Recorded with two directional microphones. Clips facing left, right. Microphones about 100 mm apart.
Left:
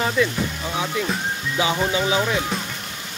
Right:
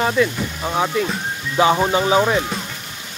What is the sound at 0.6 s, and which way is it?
Music, 45° right (ahead or behind).